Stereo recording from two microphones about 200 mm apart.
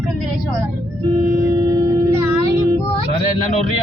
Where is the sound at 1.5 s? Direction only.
20° right (ahead or behind).